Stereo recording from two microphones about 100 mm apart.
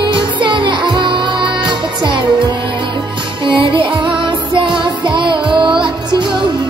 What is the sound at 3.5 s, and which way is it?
Music, 55° right (ahead or behind).